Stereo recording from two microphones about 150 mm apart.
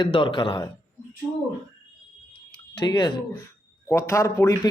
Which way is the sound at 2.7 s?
30° left (ahead or behind).